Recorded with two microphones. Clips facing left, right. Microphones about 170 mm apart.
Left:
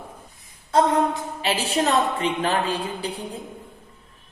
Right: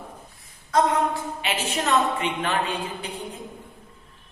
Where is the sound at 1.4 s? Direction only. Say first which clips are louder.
Left 8 dB; 35° left (ahead or behind).